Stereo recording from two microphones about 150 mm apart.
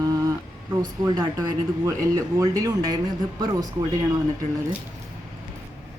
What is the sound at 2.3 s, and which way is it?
Speech, 20° right (ahead or behind).